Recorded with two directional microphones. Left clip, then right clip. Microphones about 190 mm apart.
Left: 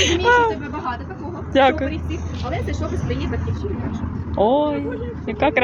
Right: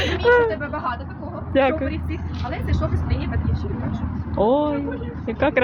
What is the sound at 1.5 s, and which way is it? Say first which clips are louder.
Speech: left 4 dB; 5° right (ahead or behind).